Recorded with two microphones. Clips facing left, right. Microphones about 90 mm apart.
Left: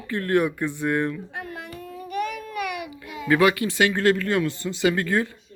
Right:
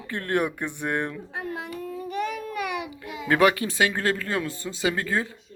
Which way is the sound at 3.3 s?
35° right (ahead or behind).